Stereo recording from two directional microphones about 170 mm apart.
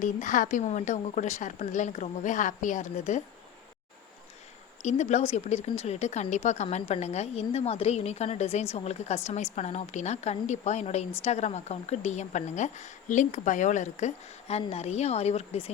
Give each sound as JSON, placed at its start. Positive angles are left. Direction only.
{"t": 0.0, "sound": "a woman's voice", "side_deg": 50}
{"t": 4.8, "sound": "a woman's voice", "side_deg": 45}